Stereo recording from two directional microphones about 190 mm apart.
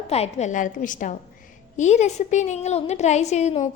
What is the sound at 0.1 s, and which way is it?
A woman's voice, 35° left (ahead or behind).